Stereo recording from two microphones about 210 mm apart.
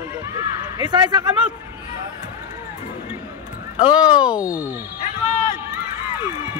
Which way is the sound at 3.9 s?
5° right (ahead or behind).